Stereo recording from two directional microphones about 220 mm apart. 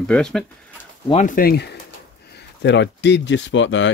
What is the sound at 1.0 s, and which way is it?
Speech, 35° left (ahead or behind).